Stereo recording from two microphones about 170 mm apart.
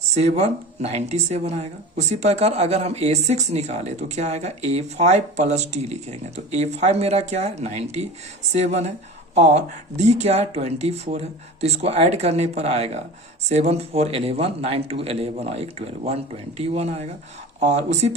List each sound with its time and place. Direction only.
0.1 s speech: 40° right (ahead or behind)